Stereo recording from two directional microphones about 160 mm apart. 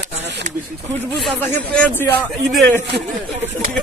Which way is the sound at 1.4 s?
10° left (ahead or behind).